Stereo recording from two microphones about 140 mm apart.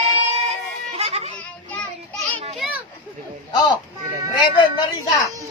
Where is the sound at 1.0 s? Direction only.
50° right (ahead or behind).